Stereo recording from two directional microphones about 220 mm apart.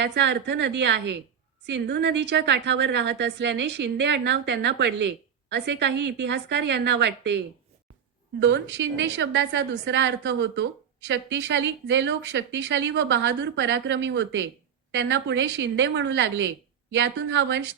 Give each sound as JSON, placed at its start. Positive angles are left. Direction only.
{"t": 0.0, "sound": "a woman's voice", "side_deg": -50}